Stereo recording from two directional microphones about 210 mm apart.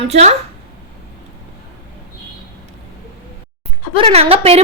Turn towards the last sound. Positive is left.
turn(degrees=-30)  # may be behind; listen again after turning